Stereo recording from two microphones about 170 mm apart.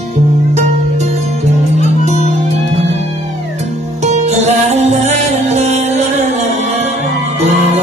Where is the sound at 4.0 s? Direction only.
40° right (ahead or behind).